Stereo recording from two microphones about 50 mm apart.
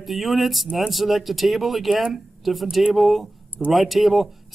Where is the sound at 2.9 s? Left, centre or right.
Centre.